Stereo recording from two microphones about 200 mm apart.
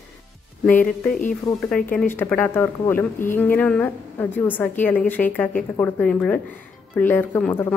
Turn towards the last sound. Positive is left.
turn(degrees=10)  # may be behind; listen again after turning